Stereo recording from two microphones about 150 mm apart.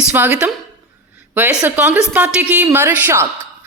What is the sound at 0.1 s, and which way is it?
A woman's voice, 10° right (ahead or behind).